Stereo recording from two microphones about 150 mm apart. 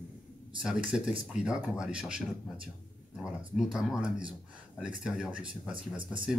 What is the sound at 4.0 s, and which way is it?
Speech, 35° right (ahead or behind).